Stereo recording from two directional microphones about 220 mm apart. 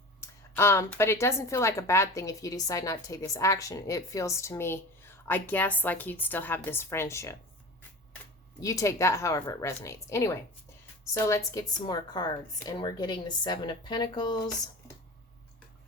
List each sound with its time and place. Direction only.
0.2 s a woman's voice: 10° left (ahead or behind)
8.6 s a woman's voice: 15° left (ahead or behind)